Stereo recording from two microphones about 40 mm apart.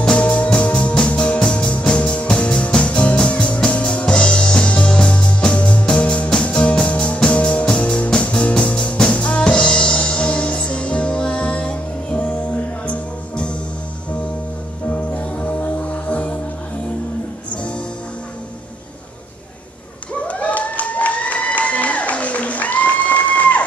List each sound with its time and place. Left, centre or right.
0.1 s music: left
14.9 s music: left
20.2 s applause: left